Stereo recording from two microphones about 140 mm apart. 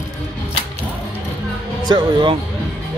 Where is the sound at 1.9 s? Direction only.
35° right (ahead or behind).